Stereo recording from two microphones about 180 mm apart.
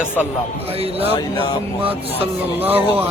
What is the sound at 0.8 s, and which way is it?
Speech, 35° right (ahead or behind).